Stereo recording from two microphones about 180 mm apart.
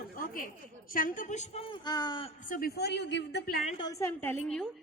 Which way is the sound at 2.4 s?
50° left (ahead or behind).